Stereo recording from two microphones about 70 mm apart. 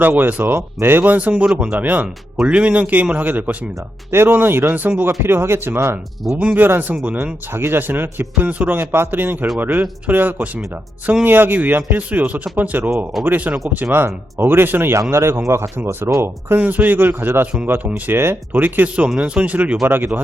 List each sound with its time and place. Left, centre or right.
0.0 s speech: right
6.3 s speech: right
7.5 s a man's voice: right
15.8 s speech: right
16.6 s speech: right
19.0 s speech: centre
19.8 s speech: right